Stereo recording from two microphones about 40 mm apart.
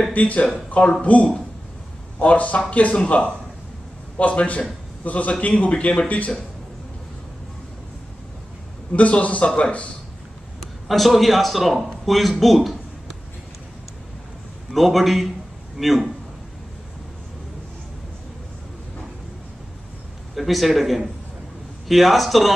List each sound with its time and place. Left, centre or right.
0.1 s speech: left
3.0 s a man's voice: left
4.2 s a man's voice: left
8.9 s speech: left
10.9 s a man's voice: centre
12.0 s a sound: centre
14.7 s a man's voice: centre
20.3 s a man's voice: centre